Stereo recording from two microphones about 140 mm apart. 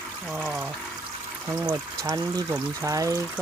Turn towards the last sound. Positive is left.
turn(degrees=-25)  # may be behind; listen again after turning